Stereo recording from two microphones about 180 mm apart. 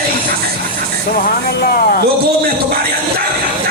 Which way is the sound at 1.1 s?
55° left (ahead or behind).